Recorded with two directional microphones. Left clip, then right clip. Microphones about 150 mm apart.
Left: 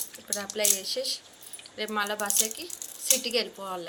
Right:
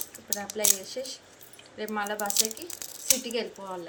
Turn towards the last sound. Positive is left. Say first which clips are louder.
# left 2 dB
turn(degrees=10)  # may be behind; listen again after turning